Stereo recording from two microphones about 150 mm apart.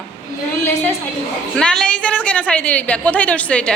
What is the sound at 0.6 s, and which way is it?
A woman's voice, 15° left (ahead or behind).